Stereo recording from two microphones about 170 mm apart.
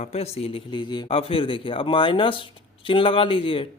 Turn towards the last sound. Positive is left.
turn(degrees=30)  # may be behind; listen again after turning